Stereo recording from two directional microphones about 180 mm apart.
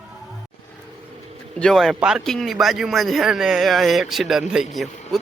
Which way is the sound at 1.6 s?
Centre (ahead or behind).